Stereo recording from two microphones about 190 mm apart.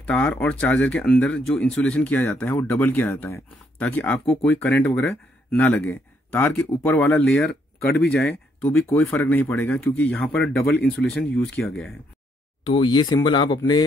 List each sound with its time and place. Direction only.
0.0 s speech: 5° left (ahead or behind)
12.6 s speech: 25° left (ahead or behind)